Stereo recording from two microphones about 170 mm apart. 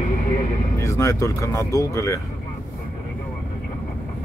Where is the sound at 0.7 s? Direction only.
20° left (ahead or behind).